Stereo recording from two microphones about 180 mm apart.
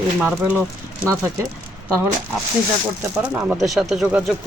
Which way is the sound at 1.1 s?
15° right (ahead or behind).